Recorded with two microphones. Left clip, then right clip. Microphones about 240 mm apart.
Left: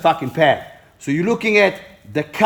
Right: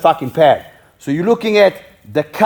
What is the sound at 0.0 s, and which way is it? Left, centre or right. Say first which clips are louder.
Speech: right 4 dB; right.